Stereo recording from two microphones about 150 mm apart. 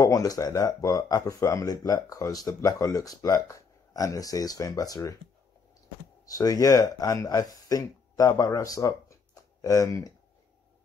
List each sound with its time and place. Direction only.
0.0 s speech: 25° left (ahead or behind)
6.2 s speech: 25° left (ahead or behind)